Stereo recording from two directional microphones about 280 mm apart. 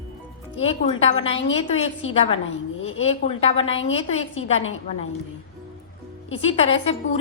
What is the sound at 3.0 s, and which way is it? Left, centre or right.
A woman's voice, left.